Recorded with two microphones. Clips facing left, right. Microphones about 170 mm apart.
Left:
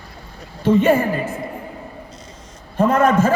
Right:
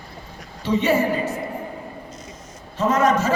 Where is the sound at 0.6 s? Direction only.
55° left (ahead or behind).